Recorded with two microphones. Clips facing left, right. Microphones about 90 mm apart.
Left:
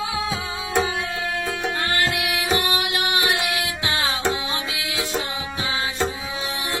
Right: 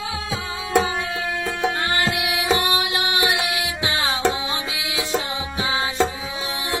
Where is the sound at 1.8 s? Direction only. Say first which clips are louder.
Right 1 dB; 20° right (ahead or behind).